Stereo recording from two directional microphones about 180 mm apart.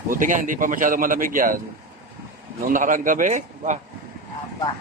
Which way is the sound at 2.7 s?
45° right (ahead or behind).